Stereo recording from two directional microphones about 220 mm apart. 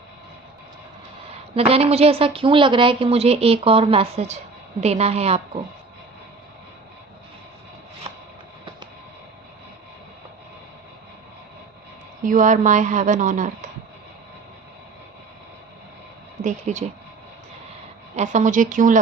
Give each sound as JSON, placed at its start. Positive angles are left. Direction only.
{"t": 1.5, "sound": "a woman's voice", "side_deg": -25}
{"t": 12.2, "sound": "a woman's voice", "side_deg": -35}
{"t": 16.4, "sound": "speech", "side_deg": -35}
{"t": 18.2, "sound": "a woman's voice", "side_deg": -35}